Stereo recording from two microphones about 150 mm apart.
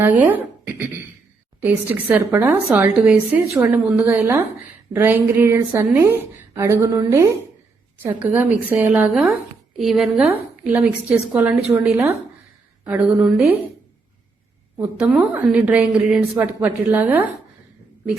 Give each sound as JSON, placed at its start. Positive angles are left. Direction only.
{"t": 0.0, "sound": "a woman's voice", "side_deg": -10}
{"t": 14.9, "sound": "a woman's voice", "side_deg": -10}